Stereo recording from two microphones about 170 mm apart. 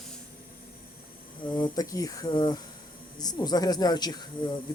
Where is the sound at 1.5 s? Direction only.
20° left (ahead or behind).